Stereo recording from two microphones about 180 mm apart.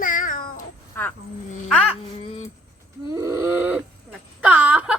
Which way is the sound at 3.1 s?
15° right (ahead or behind).